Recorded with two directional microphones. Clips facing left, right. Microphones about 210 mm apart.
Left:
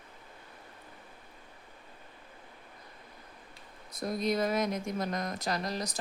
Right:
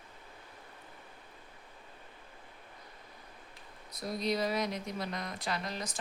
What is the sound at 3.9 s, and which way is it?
Speech, 50° left (ahead or behind).